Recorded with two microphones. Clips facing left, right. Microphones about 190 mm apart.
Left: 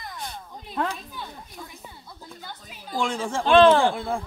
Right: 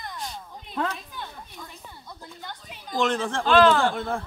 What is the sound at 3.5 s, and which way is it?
Speech, 25° left (ahead or behind).